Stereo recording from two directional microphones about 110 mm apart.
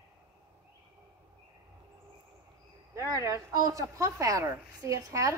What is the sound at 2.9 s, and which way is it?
Speech, 25° right (ahead or behind).